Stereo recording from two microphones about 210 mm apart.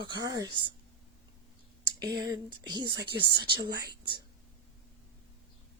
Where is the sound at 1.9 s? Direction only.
55° right (ahead or behind).